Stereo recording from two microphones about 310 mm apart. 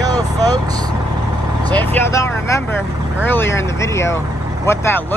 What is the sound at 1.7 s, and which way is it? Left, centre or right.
Speech, centre.